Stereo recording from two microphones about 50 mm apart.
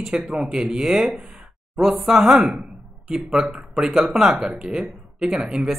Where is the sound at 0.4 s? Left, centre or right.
Centre.